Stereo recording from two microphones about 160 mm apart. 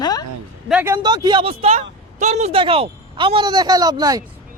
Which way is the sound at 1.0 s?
25° right (ahead or behind).